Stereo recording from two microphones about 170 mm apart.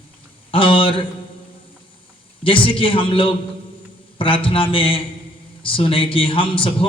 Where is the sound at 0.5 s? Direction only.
30° left (ahead or behind).